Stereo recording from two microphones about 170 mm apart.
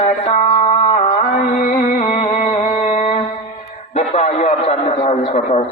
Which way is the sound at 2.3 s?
40° left (ahead or behind).